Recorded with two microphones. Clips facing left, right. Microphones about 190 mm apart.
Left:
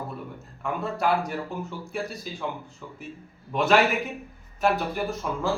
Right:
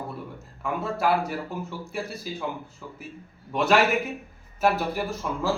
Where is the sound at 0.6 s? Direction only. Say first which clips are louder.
Right 1 dB; centre (ahead or behind).